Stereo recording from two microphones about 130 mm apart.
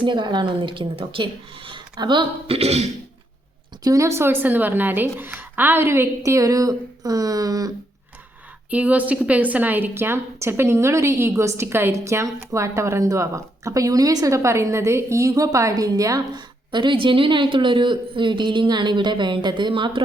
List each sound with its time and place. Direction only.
0.0 s a woman's voice: 35° right (ahead or behind)
2.6 s speech: 55° right (ahead or behind)
3.8 s a woman's voice: 25° right (ahead or behind)
8.7 s a woman's voice: 10° right (ahead or behind); by 20.1 s 40° right (ahead or behind)